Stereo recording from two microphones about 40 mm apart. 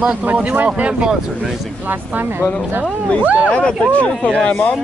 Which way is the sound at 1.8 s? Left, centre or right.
Right.